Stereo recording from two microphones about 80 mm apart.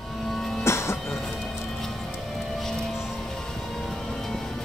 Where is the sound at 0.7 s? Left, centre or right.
Left.